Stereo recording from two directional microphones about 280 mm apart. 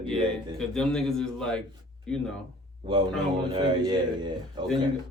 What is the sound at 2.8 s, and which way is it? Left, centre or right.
A man's voice, centre.